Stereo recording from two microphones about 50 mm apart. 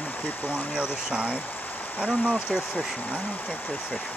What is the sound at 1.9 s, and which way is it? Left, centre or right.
Speech, left.